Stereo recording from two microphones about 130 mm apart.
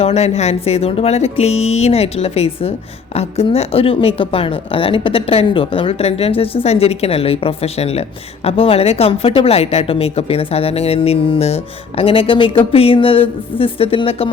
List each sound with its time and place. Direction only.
0.0 s speech: 55° left (ahead or behind)